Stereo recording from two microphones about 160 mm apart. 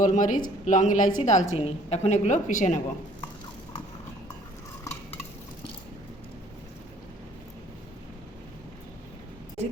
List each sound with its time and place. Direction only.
0.0 s a woman's voice: 55° left (ahead or behind)